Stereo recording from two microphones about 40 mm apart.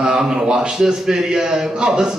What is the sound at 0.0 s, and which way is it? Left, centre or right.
Speech, centre.